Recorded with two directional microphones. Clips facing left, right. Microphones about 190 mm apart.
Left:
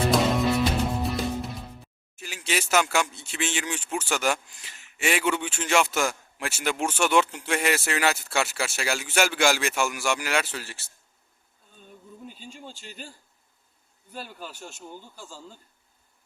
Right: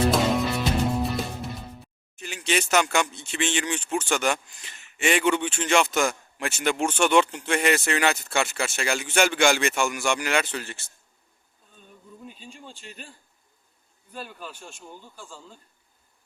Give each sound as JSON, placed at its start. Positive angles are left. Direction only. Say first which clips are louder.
{"t": 0.1, "sound": "music", "louder": "left 1 dB", "side_deg": 0}
{"t": 14.3, "sound": "speech", "louder": "even", "side_deg": 30}